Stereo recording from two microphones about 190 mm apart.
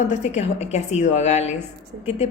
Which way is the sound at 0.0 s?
40° left (ahead or behind).